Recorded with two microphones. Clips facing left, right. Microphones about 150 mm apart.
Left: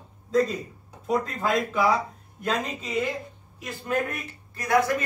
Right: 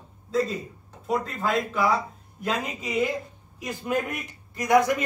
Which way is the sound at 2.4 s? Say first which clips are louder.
Left 1 dB; 10° right (ahead or behind).